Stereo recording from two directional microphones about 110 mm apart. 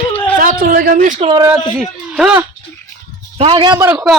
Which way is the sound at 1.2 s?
65° right (ahead or behind).